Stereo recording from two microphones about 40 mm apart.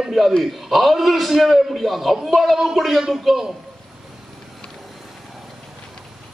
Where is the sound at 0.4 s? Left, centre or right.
Centre.